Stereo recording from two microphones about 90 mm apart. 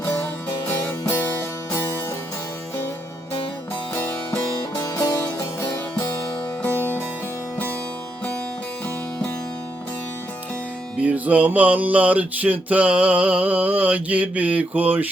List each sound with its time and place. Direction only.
0.0 s music: 25° left (ahead or behind)
4.8 s music: 45° left (ahead or behind)
6.6 s music: 20° left (ahead or behind)
11.0 s music: 15° right (ahead or behind)